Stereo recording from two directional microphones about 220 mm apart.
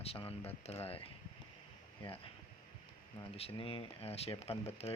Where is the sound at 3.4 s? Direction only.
25° left (ahead or behind).